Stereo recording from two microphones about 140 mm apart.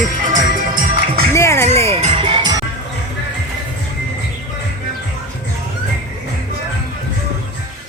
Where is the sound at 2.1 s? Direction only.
35° right (ahead or behind).